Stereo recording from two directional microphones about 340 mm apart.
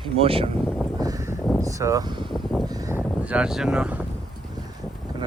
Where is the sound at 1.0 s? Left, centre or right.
Centre.